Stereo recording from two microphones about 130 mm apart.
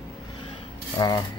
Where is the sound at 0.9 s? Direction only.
30° left (ahead or behind).